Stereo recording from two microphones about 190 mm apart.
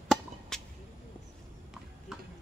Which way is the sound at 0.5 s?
5° left (ahead or behind).